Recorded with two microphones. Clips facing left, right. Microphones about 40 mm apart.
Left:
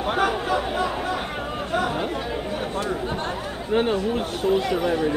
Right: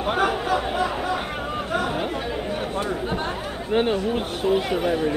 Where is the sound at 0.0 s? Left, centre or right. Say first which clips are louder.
Even; centre.